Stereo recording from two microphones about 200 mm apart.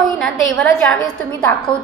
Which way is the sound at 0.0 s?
Centre (ahead or behind).